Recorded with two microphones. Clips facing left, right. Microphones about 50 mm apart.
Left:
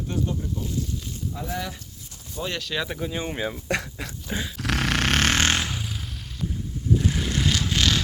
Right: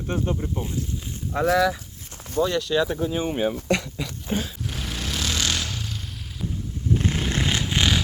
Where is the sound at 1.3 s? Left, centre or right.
Right.